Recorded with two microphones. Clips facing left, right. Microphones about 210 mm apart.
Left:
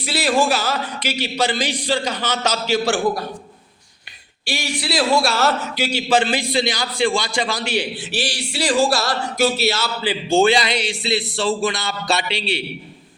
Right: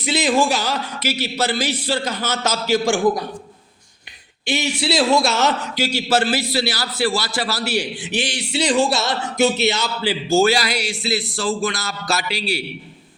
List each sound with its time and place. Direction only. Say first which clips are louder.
0.0 s a man's voice: right 1 dB; 20° right (ahead or behind)
1.0 s a man's voice: even; 10° left (ahead or behind)
2.0 s a man's voice: left 1 dB; 10° right (ahead or behind)
4.4 s speech: right 4 dB; 20° right (ahead or behind)
6.1 s a man's voice: left 2 dB; 5° right (ahead or behind)
10.3 s a man's voice: left 1 dB; 5° right (ahead or behind)